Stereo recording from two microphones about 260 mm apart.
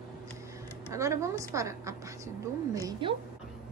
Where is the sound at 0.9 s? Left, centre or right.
Centre.